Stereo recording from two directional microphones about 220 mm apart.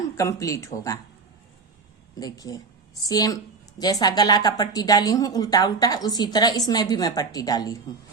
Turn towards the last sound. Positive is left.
turn(degrees=15)  # may be behind; listen again after turning